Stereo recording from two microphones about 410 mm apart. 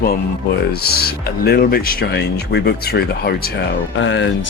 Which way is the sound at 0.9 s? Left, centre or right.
Left.